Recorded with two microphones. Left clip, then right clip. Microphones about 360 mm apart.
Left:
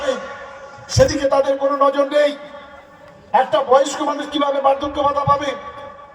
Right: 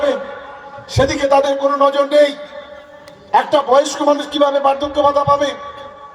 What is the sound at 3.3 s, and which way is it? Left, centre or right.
A man's voice, right.